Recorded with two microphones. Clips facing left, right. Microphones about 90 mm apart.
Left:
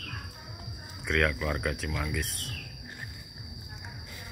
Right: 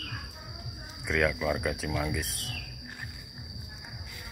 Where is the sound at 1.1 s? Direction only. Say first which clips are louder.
Right 1 dB; 5° right (ahead or behind).